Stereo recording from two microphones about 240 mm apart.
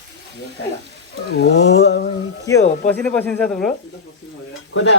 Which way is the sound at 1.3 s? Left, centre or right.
Left.